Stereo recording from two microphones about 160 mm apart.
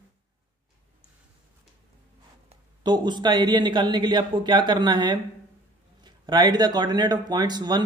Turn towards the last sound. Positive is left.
turn(degrees=-25)  # may be behind; listen again after turning